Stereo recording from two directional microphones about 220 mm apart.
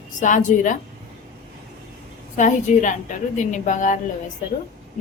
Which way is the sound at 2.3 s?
35° left (ahead or behind).